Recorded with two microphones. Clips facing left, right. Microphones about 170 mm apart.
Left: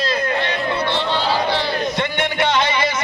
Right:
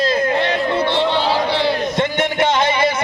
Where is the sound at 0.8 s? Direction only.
20° right (ahead or behind).